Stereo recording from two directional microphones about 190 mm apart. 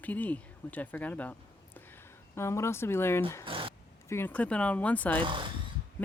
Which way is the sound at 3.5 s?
30° right (ahead or behind).